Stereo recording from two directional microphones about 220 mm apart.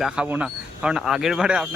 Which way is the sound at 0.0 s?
5° right (ahead or behind).